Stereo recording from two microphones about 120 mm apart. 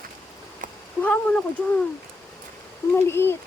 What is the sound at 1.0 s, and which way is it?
Speech, 10° left (ahead or behind).